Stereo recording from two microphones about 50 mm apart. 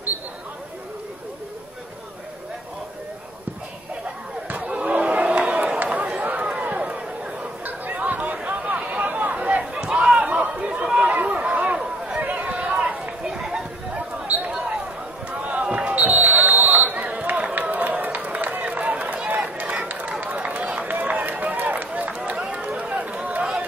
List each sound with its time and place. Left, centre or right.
4.5 s a sound: right
5.5 s chatter: right
9.8 s a sound: centre
12.2 s run: right
13.2 s run: centre
13.9 s basketball bounce: right
19.2 s run: right